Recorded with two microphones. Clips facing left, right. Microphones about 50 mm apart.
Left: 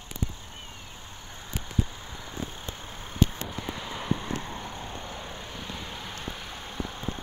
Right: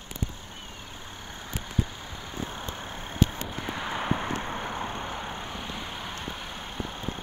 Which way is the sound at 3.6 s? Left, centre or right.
Right.